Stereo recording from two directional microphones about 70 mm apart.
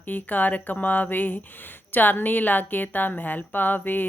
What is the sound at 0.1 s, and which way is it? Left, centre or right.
Speech, left.